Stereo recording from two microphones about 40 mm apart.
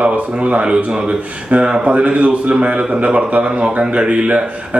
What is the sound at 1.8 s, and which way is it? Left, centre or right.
A man's voice, right.